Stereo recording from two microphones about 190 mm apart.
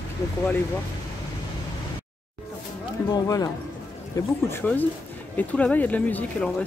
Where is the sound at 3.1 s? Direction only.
20° left (ahead or behind).